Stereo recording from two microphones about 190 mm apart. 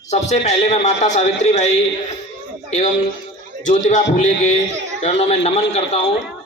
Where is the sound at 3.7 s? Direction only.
40° left (ahead or behind).